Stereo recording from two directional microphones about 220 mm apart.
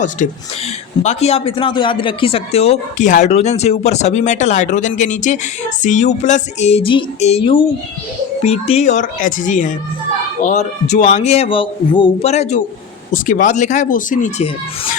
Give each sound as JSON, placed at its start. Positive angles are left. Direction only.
{"t": 0.2, "sound": "speech", "side_deg": 35}